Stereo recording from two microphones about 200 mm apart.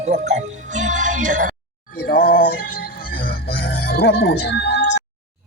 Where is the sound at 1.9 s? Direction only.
45° left (ahead or behind).